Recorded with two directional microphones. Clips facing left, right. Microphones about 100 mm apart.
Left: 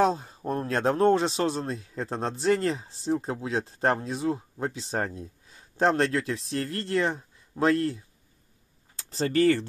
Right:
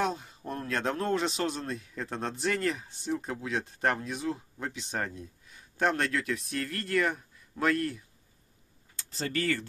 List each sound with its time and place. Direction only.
0.0 s a man's voice: 35° left (ahead or behind)